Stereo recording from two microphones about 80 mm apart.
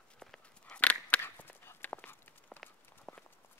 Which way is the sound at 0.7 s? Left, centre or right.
Left.